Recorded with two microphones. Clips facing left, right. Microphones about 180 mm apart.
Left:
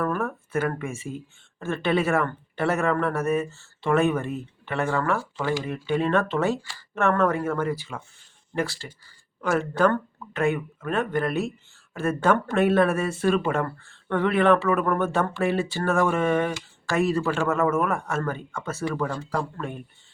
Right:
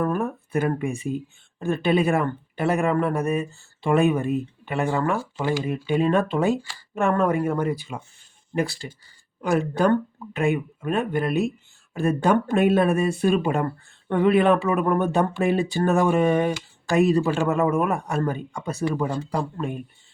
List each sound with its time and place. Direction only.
0.0 s speech: 15° right (ahead or behind)